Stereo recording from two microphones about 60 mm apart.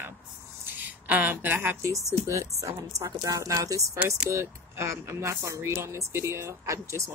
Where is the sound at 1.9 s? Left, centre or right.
Right.